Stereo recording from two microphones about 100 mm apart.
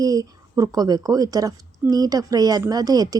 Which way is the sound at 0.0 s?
35° right (ahead or behind).